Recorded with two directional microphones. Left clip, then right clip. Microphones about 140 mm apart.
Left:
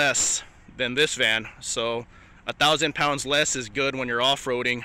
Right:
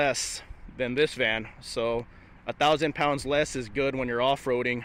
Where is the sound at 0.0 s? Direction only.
10° right (ahead or behind).